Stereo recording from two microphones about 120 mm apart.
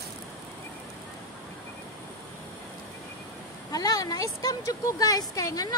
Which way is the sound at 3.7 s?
30° left (ahead or behind).